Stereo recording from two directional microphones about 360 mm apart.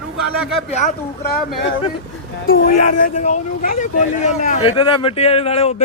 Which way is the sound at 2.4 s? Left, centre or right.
Left.